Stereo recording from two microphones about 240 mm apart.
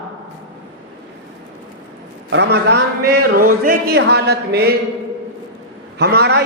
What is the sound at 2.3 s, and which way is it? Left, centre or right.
A man's voice, right.